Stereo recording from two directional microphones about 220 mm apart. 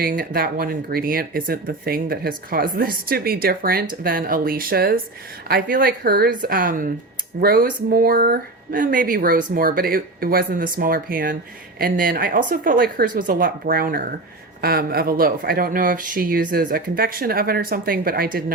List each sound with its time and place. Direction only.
0.0 s speech: 40° right (ahead or behind)